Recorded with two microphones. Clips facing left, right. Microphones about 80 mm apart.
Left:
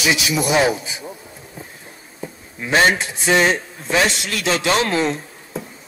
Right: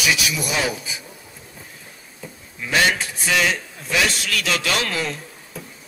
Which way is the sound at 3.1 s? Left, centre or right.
Left.